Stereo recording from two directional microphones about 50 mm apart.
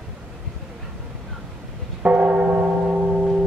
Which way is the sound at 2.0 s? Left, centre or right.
Right.